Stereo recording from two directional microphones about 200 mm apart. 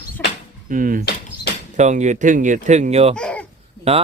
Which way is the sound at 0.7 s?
45° right (ahead or behind).